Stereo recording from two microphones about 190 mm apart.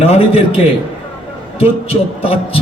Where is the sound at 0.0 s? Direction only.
30° left (ahead or behind).